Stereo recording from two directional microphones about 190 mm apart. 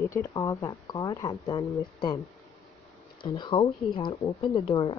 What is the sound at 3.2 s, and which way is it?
Speech, 25° left (ahead or behind).